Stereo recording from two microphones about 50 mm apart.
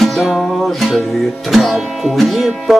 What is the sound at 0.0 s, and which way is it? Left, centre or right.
Music, centre.